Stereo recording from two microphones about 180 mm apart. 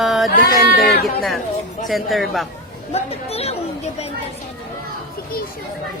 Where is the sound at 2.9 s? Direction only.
35° left (ahead or behind).